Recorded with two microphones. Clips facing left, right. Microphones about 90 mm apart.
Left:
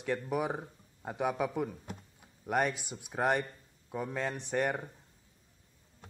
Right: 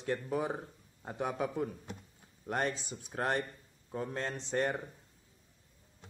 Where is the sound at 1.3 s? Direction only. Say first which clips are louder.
Left 2 dB; 90° left.